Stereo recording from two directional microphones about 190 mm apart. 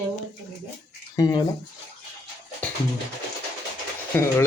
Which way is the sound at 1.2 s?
20° left (ahead or behind).